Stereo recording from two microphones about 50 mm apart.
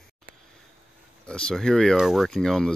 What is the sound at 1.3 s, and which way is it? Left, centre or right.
Speech, centre.